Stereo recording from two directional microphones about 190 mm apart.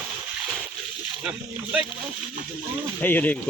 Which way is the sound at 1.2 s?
5° right (ahead or behind).